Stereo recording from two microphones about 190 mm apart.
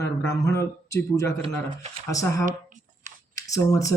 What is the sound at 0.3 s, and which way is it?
Speech, 15° left (ahead or behind).